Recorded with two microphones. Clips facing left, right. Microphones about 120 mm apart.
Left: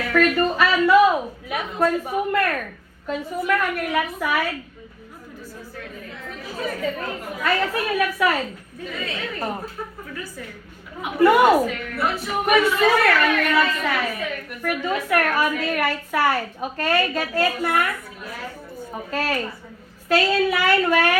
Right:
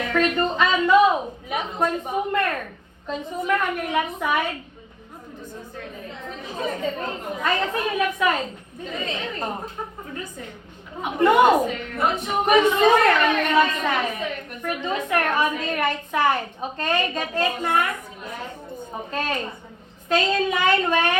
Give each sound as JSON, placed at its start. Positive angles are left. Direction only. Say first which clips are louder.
{"t": 0.0, "sound": "a woman's voice", "louder": "left 2 dB", "side_deg": -20}
{"t": 5.7, "sound": "a woman's voice", "louder": "even", "side_deg": -25}